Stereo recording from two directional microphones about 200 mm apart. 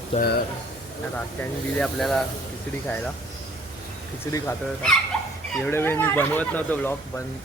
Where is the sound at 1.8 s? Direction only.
Centre (ahead or behind).